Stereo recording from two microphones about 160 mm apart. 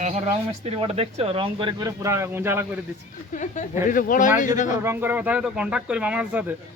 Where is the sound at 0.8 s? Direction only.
40° right (ahead or behind).